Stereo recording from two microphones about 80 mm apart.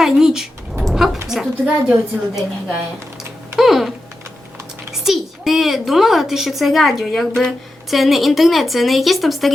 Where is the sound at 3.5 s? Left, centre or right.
Centre.